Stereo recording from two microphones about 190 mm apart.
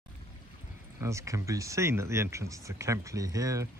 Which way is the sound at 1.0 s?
15° right (ahead or behind).